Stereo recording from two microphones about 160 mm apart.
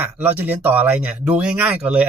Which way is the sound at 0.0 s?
10° right (ahead or behind).